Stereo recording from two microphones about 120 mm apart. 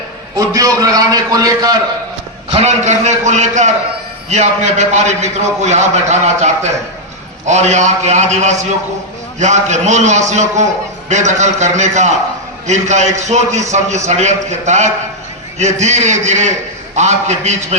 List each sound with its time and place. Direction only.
0.3 s a man's voice: 30° right (ahead or behind)
2.5 s a man's voice: 65° right (ahead or behind)